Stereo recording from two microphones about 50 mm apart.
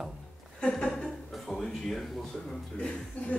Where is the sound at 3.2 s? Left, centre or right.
Left.